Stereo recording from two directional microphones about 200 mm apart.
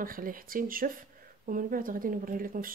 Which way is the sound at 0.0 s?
45° right (ahead or behind).